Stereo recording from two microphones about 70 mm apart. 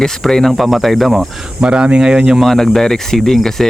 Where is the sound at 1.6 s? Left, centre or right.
Centre.